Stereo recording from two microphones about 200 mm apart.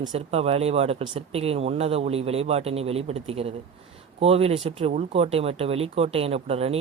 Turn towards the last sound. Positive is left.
turn(degrees=-30)  # may be behind; listen again after turning